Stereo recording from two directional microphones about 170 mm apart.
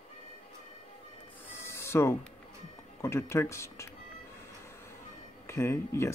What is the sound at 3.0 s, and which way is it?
Speech, 15° left (ahead or behind).